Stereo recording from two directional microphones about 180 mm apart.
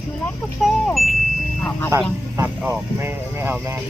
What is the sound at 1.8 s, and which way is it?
Speech, 15° right (ahead or behind).